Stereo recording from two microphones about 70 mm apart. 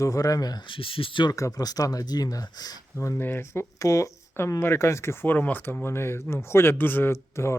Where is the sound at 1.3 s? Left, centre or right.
Left.